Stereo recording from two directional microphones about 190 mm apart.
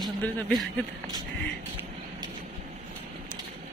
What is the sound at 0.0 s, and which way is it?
Speech, 5° left (ahead or behind).